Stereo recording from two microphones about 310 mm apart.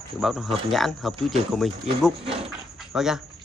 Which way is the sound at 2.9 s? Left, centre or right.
Centre.